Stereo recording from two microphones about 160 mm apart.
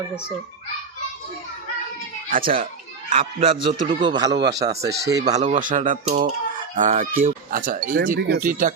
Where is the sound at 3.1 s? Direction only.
35° right (ahead or behind).